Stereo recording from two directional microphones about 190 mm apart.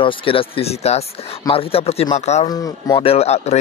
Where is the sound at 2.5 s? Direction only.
20° left (ahead or behind).